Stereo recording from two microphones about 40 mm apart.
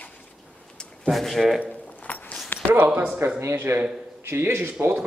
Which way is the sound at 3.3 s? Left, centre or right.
Right.